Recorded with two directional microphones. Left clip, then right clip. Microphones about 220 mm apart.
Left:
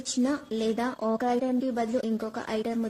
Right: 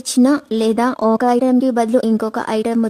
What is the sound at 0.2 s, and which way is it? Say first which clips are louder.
Speech: right 14 dB; 50° right (ahead or behind).